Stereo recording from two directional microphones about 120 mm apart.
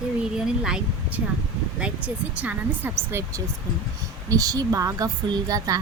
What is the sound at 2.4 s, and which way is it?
Speech, 15° right (ahead or behind).